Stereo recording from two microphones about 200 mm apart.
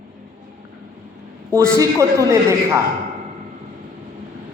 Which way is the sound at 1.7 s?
15° right (ahead or behind).